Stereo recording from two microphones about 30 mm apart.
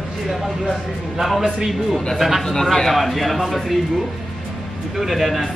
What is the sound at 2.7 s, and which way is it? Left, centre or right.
Speech, centre.